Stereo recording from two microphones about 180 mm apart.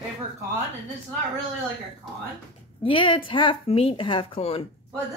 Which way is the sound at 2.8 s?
30° left (ahead or behind).